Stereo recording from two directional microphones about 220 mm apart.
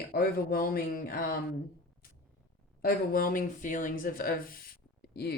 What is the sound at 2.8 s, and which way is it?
Speech, 40° left (ahead or behind).